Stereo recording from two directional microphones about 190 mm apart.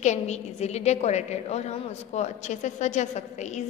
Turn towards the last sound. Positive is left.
turn(degrees=35)  # may be behind; listen again after turning